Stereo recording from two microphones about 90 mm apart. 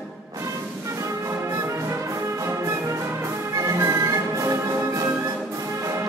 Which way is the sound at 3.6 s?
35° right (ahead or behind).